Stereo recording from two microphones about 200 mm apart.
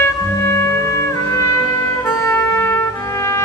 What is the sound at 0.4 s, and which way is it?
Music, 15° left (ahead or behind).